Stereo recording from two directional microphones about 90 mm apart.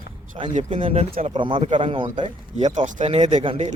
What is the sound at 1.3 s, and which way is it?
Speech, 65° right (ahead or behind).